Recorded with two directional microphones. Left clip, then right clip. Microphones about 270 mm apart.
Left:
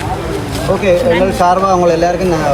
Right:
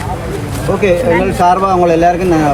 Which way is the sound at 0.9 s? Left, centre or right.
Right.